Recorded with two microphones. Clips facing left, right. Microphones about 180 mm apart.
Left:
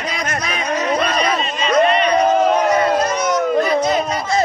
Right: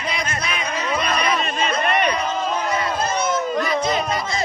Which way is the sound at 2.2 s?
60° left (ahead or behind).